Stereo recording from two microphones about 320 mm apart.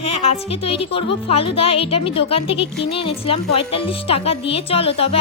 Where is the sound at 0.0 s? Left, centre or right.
Centre.